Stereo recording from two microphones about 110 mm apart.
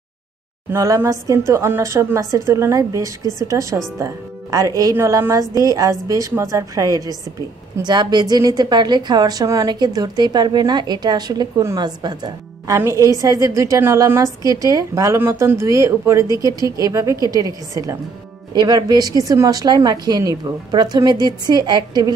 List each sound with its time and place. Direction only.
0.7 s a woman's voice: 25° right (ahead or behind)
12.7 s a woman's voice: 25° right (ahead or behind)